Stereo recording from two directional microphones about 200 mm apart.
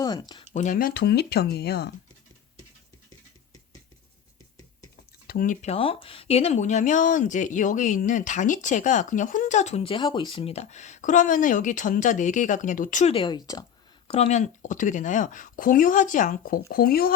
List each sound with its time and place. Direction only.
0.0 s speech: 20° left (ahead or behind)
0.5 s speech: 40° left (ahead or behind)
5.3 s speech: 40° left (ahead or behind); by 13.7 s 20° left (ahead or behind)
14.1 s speech: 35° left (ahead or behind); by 17.2 s 50° left (ahead or behind)